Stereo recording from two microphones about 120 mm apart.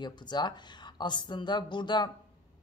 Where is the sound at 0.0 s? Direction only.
35° left (ahead or behind).